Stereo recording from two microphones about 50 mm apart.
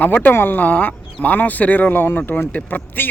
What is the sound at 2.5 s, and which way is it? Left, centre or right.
Speech, left.